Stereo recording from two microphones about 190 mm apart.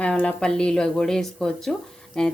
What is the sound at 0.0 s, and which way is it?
Speech, 5° left (ahead or behind).